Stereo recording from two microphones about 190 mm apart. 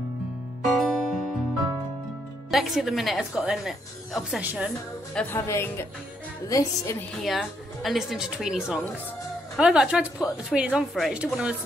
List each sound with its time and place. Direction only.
0.7 s music: centre (ahead or behind)
2.5 s a woman's voice: centre (ahead or behind)
5.1 s a woman's voice: 10° left (ahead or behind)
7.2 s a woman's voice: centre (ahead or behind)